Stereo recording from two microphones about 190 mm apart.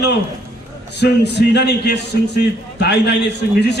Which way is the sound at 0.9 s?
60° left (ahead or behind).